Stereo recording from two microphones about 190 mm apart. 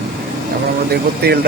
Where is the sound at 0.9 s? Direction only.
55° right (ahead or behind).